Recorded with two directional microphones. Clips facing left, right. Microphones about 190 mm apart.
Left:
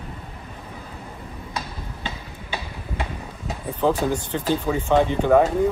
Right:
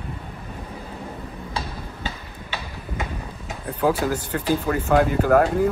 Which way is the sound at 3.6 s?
5° right (ahead or behind).